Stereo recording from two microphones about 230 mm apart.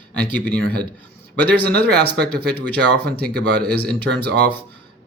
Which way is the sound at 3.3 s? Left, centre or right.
Right.